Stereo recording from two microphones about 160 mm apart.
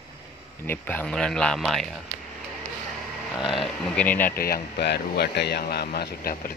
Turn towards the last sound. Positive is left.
turn(degrees=80)